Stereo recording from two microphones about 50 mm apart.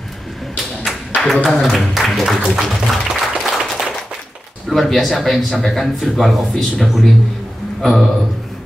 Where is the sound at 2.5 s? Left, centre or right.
Centre.